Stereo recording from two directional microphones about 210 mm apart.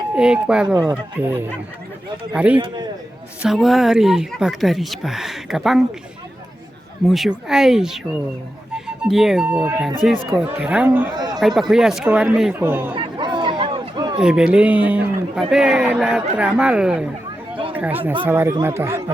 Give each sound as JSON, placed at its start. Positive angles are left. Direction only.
{"t": 0.2, "sound": "speech", "side_deg": -5}
{"t": 7.1, "sound": "speech", "side_deg": 0}
{"t": 9.0, "sound": "speech", "side_deg": 0}
{"t": 11.1, "sound": "a man's voice", "side_deg": -20}
{"t": 11.3, "sound": "speech", "side_deg": 0}
{"t": 12.9, "sound": "a sound", "side_deg": -25}
{"t": 14.2, "sound": "speech", "side_deg": -5}